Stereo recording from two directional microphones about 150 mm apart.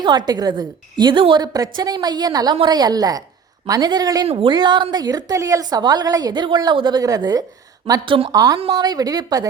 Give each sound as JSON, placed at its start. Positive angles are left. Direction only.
{"t": 0.0, "sound": "a woman's voice", "side_deg": -30}